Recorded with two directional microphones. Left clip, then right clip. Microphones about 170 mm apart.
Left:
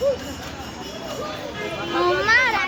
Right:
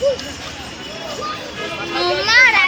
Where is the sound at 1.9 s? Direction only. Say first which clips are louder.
Right 4 dB; 40° left (ahead or behind).